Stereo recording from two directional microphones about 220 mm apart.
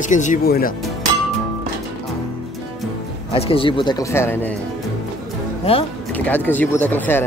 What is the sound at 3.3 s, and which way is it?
Speech, 25° left (ahead or behind).